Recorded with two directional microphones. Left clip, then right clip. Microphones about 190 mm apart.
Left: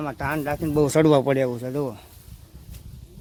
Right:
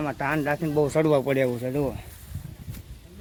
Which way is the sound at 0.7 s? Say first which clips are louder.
Left 4 dB; 60° left (ahead or behind).